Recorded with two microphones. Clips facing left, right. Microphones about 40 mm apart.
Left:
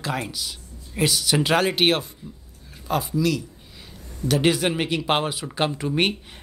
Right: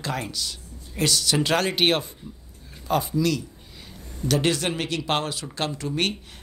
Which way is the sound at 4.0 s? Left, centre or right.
Right.